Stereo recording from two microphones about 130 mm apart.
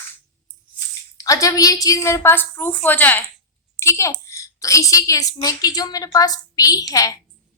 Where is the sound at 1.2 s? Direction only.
25° left (ahead or behind).